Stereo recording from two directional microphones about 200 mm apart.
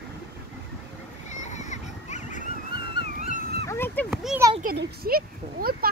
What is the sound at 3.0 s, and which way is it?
Dog, 45° left (ahead or behind).